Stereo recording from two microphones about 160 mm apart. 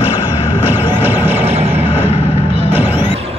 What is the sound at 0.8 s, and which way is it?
Music, 15° right (ahead or behind).